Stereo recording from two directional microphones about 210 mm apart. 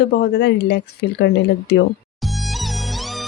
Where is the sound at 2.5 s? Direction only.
Centre (ahead or behind).